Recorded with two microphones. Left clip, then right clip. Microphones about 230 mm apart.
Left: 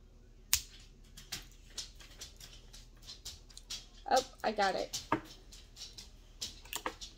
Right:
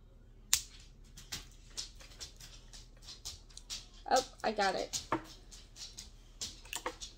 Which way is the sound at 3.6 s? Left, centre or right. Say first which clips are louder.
Even; centre.